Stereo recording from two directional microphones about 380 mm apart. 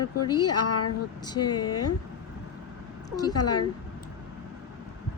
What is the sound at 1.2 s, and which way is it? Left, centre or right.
Speech, centre.